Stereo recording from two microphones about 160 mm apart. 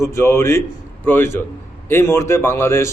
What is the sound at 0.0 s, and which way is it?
A man's voice, 15° left (ahead or behind).